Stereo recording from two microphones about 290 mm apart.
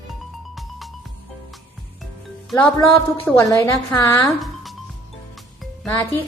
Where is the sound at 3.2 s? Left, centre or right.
Centre.